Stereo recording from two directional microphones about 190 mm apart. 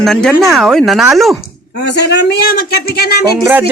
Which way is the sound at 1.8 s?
60° left (ahead or behind).